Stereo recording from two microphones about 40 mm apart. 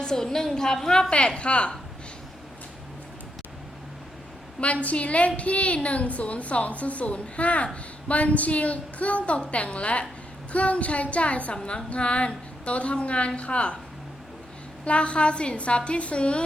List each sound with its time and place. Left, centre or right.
0.0 s a woman's voice: centre
1.4 s a woman's voice: left
4.6 s a woman's voice: left
14.8 s a woman's voice: left